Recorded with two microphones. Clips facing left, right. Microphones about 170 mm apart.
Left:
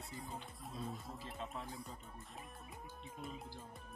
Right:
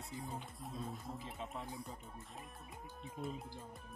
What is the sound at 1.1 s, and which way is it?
Speech, 20° right (ahead or behind).